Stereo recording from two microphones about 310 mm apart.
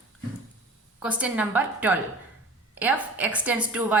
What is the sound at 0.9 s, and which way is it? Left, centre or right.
A woman's voice, centre.